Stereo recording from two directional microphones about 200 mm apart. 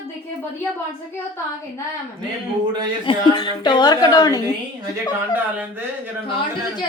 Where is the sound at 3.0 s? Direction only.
25° left (ahead or behind).